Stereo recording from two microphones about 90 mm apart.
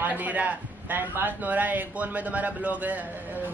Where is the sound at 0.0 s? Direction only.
20° right (ahead or behind).